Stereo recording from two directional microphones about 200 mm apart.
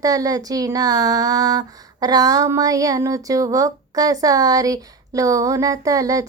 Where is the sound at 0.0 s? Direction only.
20° right (ahead or behind).